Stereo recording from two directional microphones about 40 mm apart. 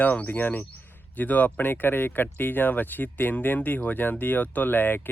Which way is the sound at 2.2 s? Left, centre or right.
Left.